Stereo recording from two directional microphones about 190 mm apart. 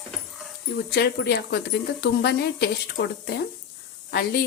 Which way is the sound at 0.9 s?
60° left (ahead or behind).